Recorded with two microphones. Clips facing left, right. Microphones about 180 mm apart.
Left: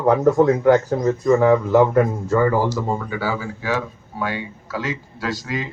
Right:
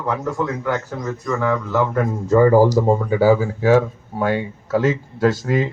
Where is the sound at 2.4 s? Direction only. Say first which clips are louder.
Right 8 dB; 40° right (ahead or behind).